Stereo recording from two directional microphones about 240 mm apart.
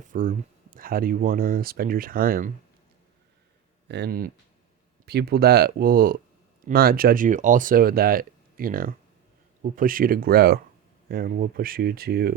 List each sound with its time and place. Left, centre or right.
0.0 s speech: right
3.8 s speech: right